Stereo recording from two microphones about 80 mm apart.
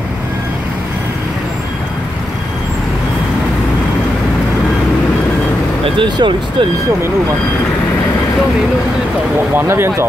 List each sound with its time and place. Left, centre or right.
5.9 s speech: right
9.6 s speech: right